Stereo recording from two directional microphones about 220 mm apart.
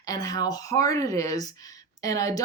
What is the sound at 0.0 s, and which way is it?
Speech, 15° left (ahead or behind).